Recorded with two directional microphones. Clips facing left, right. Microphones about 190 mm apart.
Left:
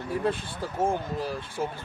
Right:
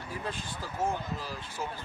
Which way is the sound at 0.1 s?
60° left (ahead or behind).